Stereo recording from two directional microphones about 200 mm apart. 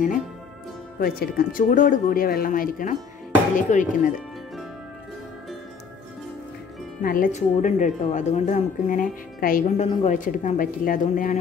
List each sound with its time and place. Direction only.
0.9 s speech: 50° left (ahead or behind)
7.0 s speech: 45° left (ahead or behind)